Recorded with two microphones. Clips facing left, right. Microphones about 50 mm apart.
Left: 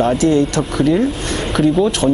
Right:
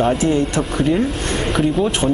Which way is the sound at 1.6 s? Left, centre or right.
Centre.